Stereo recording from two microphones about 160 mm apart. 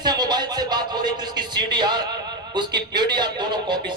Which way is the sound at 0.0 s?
25° right (ahead or behind).